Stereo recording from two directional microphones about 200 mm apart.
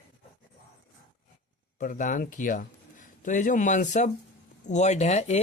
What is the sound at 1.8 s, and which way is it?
Speech, 40° left (ahead or behind).